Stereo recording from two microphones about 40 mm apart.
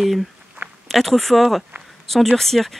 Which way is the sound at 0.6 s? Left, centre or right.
Right.